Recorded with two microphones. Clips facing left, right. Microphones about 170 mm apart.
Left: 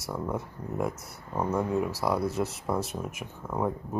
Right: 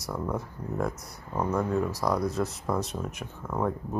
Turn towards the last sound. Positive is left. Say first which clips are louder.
# right 1 dB
turn(degrees=10)  # may be behind; listen again after turning